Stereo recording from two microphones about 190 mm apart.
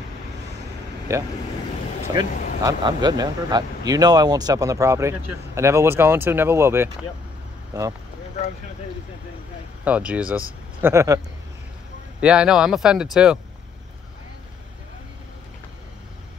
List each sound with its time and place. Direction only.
1.1 s speech: 15° right (ahead or behind)
9.8 s speech: 5° right (ahead or behind)
12.2 s speech: 5° right (ahead or behind)